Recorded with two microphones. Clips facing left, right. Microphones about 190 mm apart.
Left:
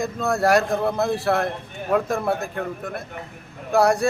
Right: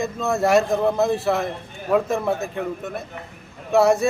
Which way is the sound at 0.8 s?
15° right (ahead or behind).